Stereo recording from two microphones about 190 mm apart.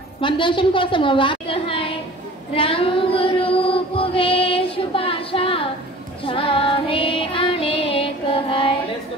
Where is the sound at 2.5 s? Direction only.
30° left (ahead or behind).